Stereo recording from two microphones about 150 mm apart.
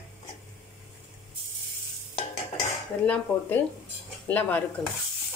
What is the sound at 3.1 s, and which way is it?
A woman's voice, 15° left (ahead or behind).